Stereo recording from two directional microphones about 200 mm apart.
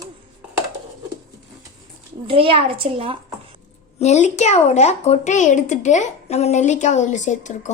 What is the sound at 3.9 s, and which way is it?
A woman's voice, 35° left (ahead or behind).